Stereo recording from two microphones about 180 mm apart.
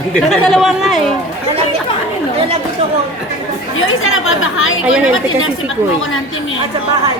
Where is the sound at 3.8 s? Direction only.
90° left.